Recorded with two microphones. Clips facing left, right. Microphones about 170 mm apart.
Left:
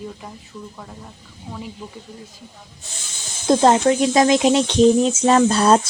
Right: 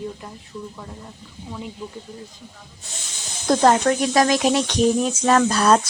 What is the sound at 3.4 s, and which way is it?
Speech, 20° left (ahead or behind).